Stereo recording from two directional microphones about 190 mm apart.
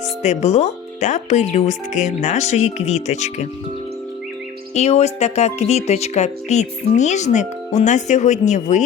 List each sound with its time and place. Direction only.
0.2 s speech: 35° left (ahead or behind)
4.7 s speech: 35° left (ahead or behind)